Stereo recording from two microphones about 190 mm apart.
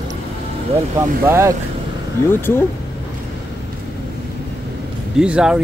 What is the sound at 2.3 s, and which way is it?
Speech, 10° left (ahead or behind).